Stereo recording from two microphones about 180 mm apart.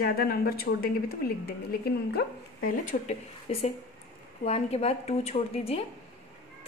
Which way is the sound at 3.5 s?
35° left (ahead or behind).